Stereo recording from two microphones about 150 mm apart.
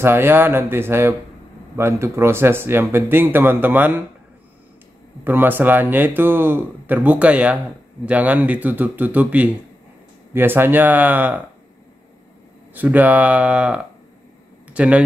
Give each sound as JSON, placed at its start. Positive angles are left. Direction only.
{"t": 0.0, "sound": "speech", "side_deg": -15}
{"t": 5.2, "sound": "speech", "side_deg": -15}
{"t": 12.7, "sound": "speech", "side_deg": -10}